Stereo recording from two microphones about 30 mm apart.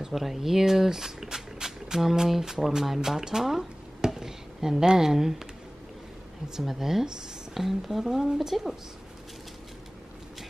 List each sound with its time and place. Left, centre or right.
0.1 s speech: centre
6.5 s speech: centre